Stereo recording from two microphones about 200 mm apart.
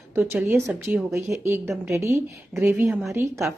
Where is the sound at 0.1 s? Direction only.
5° right (ahead or behind).